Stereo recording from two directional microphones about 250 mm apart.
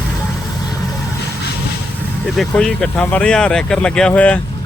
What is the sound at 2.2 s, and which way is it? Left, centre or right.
Speech, centre.